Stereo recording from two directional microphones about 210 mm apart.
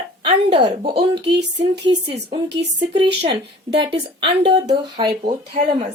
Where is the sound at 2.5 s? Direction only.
55° right (ahead or behind).